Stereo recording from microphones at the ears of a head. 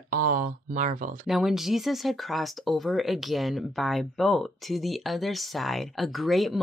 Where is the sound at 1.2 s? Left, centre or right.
Centre.